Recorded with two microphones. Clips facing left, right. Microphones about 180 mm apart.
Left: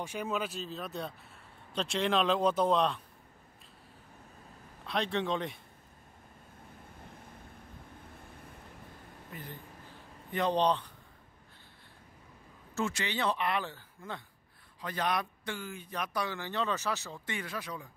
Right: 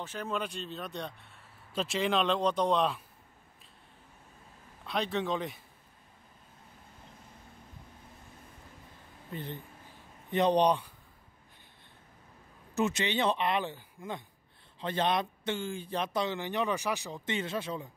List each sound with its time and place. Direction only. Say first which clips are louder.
0.0 s a man's voice: left 1 dB; 10° left (ahead or behind)
4.8 s a man's voice: even; centre (ahead or behind)
9.3 s speech: right 6 dB; 25° right (ahead or behind)
12.7 s speech: right 4 dB; 20° right (ahead or behind)